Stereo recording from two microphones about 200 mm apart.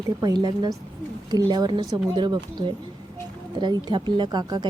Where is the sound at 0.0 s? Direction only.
20° right (ahead or behind).